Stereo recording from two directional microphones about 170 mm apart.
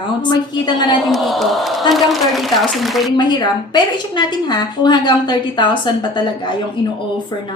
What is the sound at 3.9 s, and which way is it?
A woman's voice, 25° left (ahead or behind).